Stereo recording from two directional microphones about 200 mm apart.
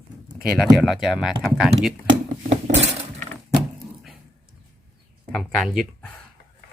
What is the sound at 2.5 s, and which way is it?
Dishes, 35° right (ahead or behind).